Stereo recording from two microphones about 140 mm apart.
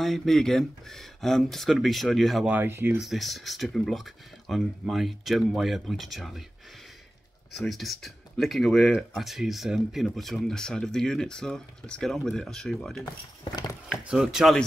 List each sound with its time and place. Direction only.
0.0 s speech: centre (ahead or behind)
2.5 s speech: 15° right (ahead or behind)
3.0 s speech: centre (ahead or behind)
7.5 s speech: centre (ahead or behind)